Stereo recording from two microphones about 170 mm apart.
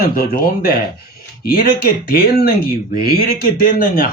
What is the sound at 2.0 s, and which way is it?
Speech, 60° left (ahead or behind).